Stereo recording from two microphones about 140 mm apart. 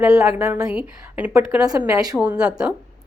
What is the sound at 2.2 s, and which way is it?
Speech, 10° right (ahead or behind).